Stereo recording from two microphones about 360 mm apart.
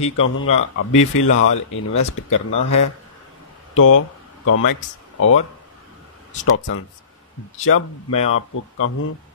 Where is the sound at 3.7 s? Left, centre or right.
Left.